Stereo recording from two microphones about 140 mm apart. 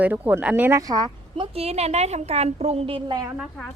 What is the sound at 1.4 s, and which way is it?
A woman's voice, 45° right (ahead or behind).